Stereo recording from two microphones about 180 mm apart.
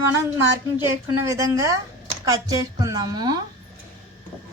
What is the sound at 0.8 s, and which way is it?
A woman's voice, 15° right (ahead or behind).